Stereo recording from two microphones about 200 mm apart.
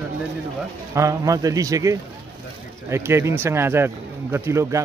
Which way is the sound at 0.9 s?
15° right (ahead or behind).